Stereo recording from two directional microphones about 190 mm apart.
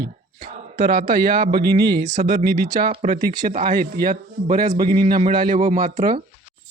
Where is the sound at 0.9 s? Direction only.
55° right (ahead or behind).